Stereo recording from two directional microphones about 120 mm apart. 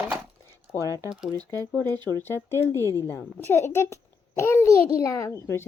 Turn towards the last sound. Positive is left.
turn(degrees=20)  # may be behind; listen again after turning